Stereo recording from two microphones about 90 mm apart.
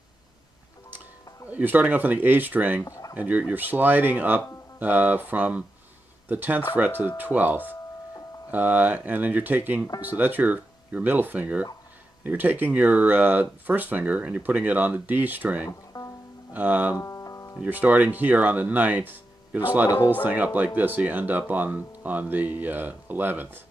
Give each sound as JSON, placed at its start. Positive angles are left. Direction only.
{"t": 1.5, "sound": "speech", "side_deg": -20}
{"t": 2.8, "sound": "speech", "side_deg": 40}
{"t": 3.2, "sound": "speech", "side_deg": -20}
{"t": 15.9, "sound": "music", "side_deg": 50}
{"t": 16.5, "sound": "speech", "side_deg": -20}
{"t": 17.0, "sound": "music", "side_deg": 35}
{"t": 17.6, "sound": "speech", "side_deg": -20}